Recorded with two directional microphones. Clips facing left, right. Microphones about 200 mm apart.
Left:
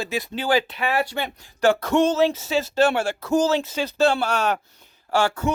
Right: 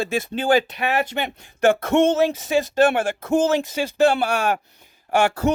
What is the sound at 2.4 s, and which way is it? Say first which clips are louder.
Speech: right 2 dB; 50° right (ahead or behind).